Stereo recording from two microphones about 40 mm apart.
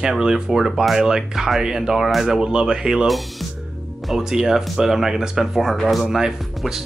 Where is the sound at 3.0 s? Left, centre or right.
Centre.